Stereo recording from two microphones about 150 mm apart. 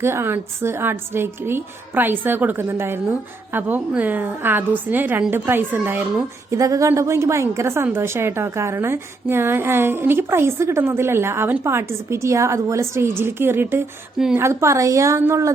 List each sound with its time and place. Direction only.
0.0 s a woman's voice: 15° right (ahead or behind)